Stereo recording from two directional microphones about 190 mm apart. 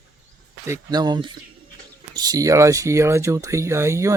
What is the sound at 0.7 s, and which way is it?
Speech, 20° right (ahead or behind).